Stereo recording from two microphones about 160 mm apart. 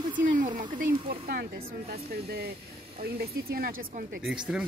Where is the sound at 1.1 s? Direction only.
70° right (ahead or behind).